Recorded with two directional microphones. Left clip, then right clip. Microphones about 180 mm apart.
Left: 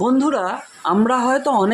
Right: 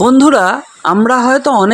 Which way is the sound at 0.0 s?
45° right (ahead or behind).